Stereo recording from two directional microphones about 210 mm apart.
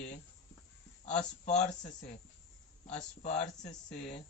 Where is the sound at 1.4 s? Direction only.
35° left (ahead or behind).